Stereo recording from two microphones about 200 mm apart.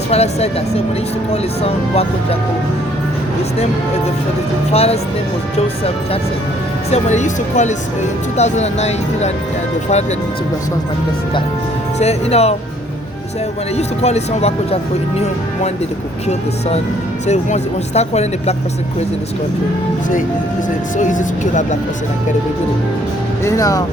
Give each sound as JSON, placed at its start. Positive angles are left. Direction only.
{"t": 0.1, "sound": "speech", "side_deg": 30}
{"t": 4.7, "sound": "speech", "side_deg": 30}
{"t": 11.9, "sound": "speech", "side_deg": 30}
{"t": 13.7, "sound": "speech", "side_deg": 35}
{"t": 17.2, "sound": "speech", "side_deg": 35}
{"t": 20.9, "sound": "speech", "side_deg": 40}
{"t": 23.4, "sound": "speech", "side_deg": 15}